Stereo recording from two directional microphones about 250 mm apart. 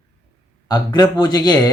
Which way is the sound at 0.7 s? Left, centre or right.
Centre.